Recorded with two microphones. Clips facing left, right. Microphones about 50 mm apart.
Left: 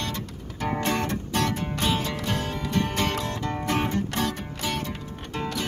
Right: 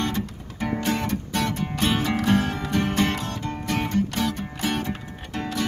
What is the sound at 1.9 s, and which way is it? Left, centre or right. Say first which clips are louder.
Music: right 3 dB; right.